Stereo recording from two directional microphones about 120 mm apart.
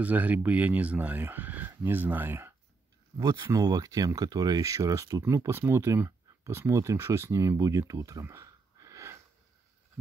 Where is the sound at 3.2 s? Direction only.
35° right (ahead or behind).